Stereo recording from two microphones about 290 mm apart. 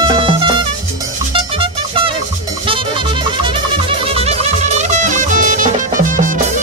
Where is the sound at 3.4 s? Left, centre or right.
Centre.